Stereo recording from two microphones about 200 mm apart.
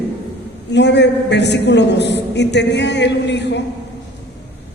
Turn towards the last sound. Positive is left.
turn(degrees=60)  # may be behind; listen again after turning